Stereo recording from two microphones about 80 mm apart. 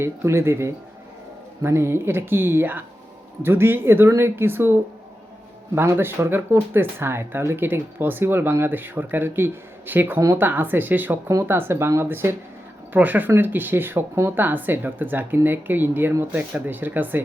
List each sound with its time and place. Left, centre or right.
0.0 s speech: right